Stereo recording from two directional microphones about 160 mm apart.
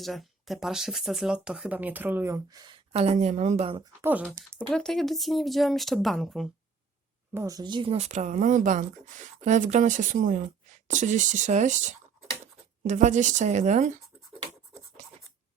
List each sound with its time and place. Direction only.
0.0 s speech: centre (ahead or behind); by 2.7 s 25° right (ahead or behind)
2.9 s a woman's voice: 40° right (ahead or behind)
4.0 s speech: 10° right (ahead or behind)
4.7 s speech: centre (ahead or behind)
7.3 s speech: 20° right (ahead or behind); by 13.9 s 45° right (ahead or behind)